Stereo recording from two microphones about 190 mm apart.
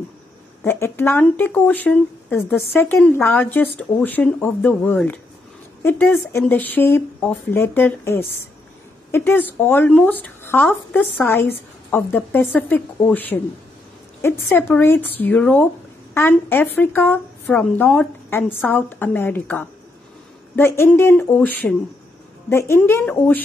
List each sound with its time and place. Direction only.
0.7 s speech: 10° left (ahead or behind)
22.5 s speech: 15° left (ahead or behind)